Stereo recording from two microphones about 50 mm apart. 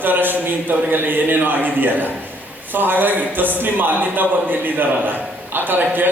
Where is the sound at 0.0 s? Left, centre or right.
Right.